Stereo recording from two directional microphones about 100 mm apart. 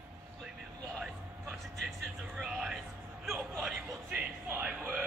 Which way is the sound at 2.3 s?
5° right (ahead or behind).